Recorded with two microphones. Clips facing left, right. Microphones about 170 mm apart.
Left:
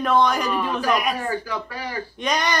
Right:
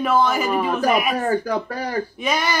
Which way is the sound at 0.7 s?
45° right (ahead or behind).